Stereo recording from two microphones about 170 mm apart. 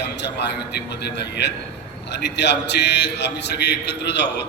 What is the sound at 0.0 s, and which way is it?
A man's voice, 90° left.